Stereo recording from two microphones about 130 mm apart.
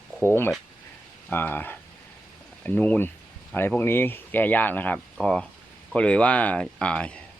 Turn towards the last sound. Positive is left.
turn(degrees=10)  # may be behind; listen again after turning